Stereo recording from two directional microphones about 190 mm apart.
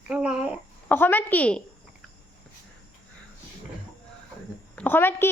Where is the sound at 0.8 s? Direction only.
10° left (ahead or behind).